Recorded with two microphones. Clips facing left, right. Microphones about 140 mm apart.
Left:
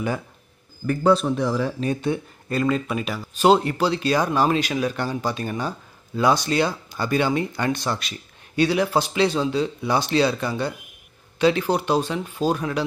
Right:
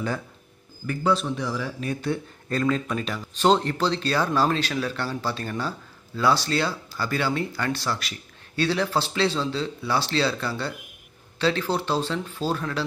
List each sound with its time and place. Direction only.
0.8 s speech: 45° left (ahead or behind)
2.0 s speech: 10° left (ahead or behind)